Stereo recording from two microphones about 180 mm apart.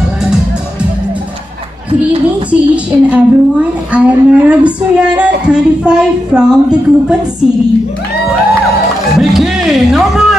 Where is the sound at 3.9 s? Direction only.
5° right (ahead or behind).